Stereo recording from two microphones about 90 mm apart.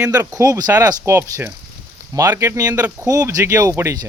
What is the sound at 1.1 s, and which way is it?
A man's voice, 30° right (ahead or behind).